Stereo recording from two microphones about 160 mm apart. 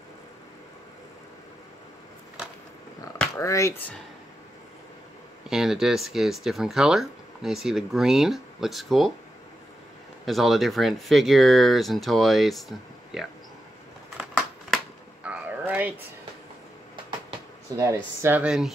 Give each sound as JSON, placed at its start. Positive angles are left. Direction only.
{"t": 3.3, "sound": "speech", "side_deg": 20}
{"t": 5.5, "sound": "speech", "side_deg": -5}
{"t": 10.2, "sound": "speech", "side_deg": 0}
{"t": 14.1, "sound": "a sound", "side_deg": -5}
{"t": 17.7, "sound": "speech", "side_deg": -20}
{"t": 18.4, "sound": "speech", "side_deg": -5}